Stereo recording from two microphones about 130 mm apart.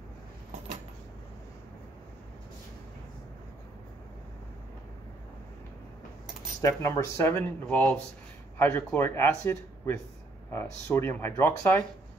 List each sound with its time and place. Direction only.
6.6 s speech: 20° left (ahead or behind)